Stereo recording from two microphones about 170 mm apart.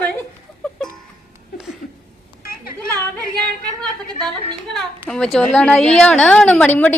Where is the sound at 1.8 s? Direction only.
55° left (ahead or behind).